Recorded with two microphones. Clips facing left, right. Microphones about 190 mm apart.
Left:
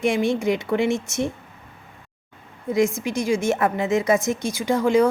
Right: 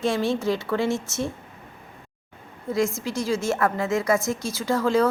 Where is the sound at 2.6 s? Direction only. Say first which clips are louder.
Left 4 dB; 15° left (ahead or behind).